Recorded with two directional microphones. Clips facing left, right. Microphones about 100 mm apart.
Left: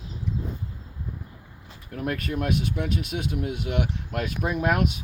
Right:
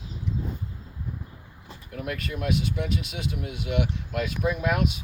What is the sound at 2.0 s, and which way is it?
Speech, 45° left (ahead or behind).